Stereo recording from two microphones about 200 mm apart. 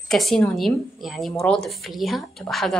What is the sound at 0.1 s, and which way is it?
A woman's voice, centre (ahead or behind).